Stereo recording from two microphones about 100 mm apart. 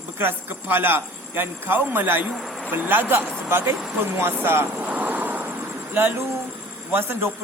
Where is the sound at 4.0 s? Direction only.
25° right (ahead or behind).